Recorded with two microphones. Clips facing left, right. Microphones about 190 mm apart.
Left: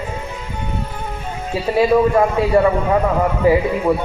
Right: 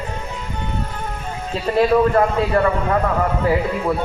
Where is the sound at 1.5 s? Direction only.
10° left (ahead or behind).